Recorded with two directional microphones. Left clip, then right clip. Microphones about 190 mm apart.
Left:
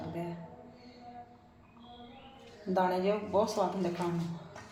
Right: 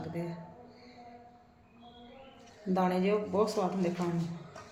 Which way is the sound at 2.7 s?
20° right (ahead or behind).